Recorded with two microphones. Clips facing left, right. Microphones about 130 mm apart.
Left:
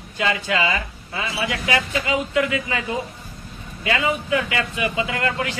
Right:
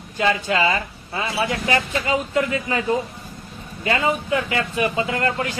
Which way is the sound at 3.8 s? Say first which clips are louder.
Right 1 dB; 40° right (ahead or behind).